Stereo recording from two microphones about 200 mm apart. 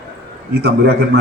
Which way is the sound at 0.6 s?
55° right (ahead or behind).